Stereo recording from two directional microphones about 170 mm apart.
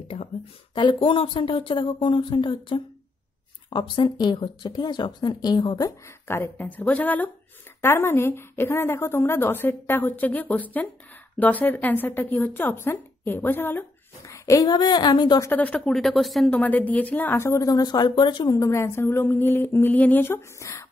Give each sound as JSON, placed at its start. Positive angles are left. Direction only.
{"t": 0.1, "sound": "speech", "side_deg": 40}
{"t": 0.7, "sound": "a woman's voice", "side_deg": 30}
{"t": 15.5, "sound": "a woman's voice", "side_deg": 5}